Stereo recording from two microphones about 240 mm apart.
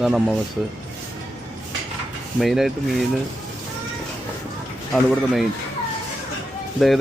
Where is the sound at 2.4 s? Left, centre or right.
Centre.